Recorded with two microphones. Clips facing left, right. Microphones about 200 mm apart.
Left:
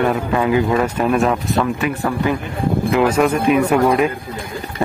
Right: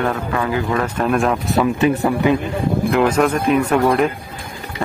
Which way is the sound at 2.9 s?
5° left (ahead or behind).